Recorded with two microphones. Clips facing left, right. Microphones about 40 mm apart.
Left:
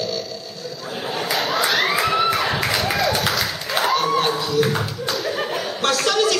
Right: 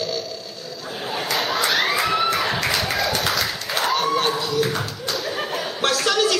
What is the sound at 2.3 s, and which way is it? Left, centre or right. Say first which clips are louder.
Tap: left 1 dB; centre.